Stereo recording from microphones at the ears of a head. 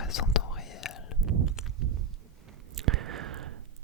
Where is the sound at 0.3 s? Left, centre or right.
Left.